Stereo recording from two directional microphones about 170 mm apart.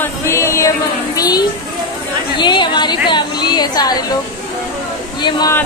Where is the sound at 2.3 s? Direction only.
25° left (ahead or behind).